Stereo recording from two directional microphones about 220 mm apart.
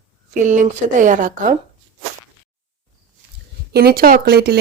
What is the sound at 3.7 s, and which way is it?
Speech, 45° right (ahead or behind).